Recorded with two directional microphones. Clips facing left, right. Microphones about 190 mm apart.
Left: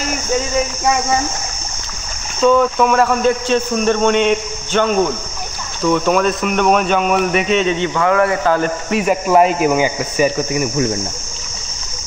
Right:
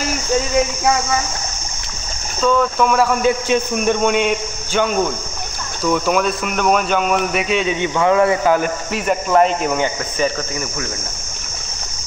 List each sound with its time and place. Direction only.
2.4 s speech: centre (ahead or behind)
3.2 s speech: 10° right (ahead or behind)
8.9 s speech: 5° left (ahead or behind)